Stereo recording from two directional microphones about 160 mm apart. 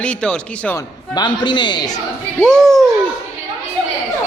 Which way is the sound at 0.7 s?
25° left (ahead or behind).